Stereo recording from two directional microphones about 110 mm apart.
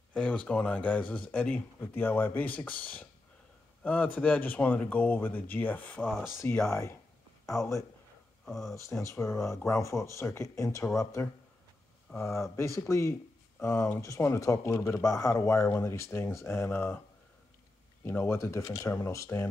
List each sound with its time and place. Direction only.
0.1 s speech: 10° left (ahead or behind)
6.7 s speech: 25° left (ahead or behind)
8.5 s speech: centre (ahead or behind)
9.0 s speech: 25° left (ahead or behind)
12.4 s speech: 25° left (ahead or behind)
18.0 s speech: 20° left (ahead or behind)